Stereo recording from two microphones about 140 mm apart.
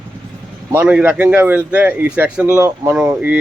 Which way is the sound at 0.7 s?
10° right (ahead or behind).